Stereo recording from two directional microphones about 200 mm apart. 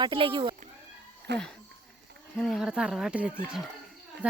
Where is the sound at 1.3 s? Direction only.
55° right (ahead or behind).